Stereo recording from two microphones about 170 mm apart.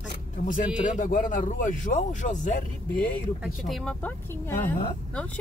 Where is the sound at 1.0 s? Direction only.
50° left (ahead or behind).